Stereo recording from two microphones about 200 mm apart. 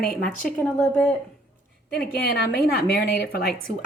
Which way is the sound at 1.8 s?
50° left (ahead or behind).